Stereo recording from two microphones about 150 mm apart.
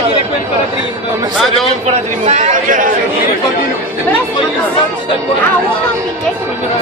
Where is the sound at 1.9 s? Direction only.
50° right (ahead or behind).